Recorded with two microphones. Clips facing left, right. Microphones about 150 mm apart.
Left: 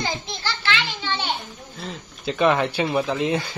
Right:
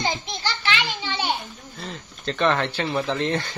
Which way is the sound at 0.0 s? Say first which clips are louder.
Right 1 dB; 15° right (ahead or behind).